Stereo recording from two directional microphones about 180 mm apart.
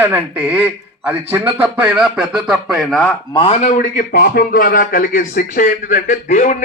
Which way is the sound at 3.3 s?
30° left (ahead or behind).